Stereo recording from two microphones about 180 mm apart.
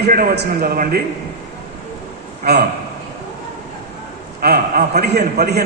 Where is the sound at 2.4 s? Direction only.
60° right (ahead or behind).